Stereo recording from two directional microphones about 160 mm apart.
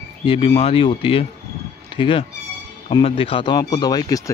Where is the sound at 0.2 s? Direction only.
35° left (ahead or behind).